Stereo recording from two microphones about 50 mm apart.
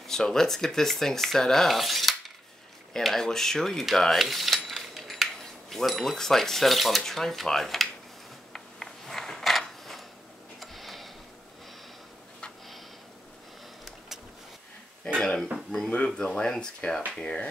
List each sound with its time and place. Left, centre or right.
0.0 s speech: centre
4.2 s cutlery: centre
7.0 s speech: centre
8.5 s a sound: centre
10.6 s tick: centre
13.8 s vehicle: centre
15.1 s dishes: centre
16.3 s speech: centre